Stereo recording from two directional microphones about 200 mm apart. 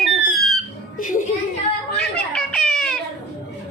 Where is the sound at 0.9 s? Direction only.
40° left (ahead or behind).